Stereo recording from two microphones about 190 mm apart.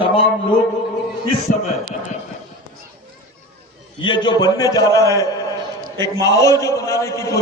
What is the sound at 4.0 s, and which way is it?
A man's voice, 25° left (ahead or behind).